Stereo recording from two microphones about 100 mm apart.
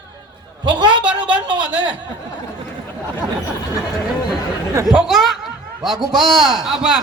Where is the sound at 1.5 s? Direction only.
55° right (ahead or behind).